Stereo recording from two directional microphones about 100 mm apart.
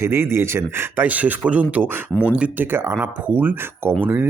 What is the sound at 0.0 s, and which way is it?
Speech, 25° right (ahead or behind).